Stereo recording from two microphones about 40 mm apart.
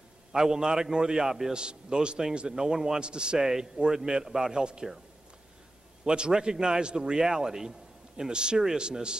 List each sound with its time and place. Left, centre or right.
0.3 s a man's voice: centre
1.2 s a man's voice: centre
1.5 s a man's voice: right
3.3 s a man's voice: centre
6.0 s a man's voice: right